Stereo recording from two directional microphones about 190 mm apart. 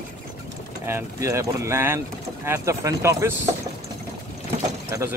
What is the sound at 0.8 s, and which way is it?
Speech, 15° right (ahead or behind).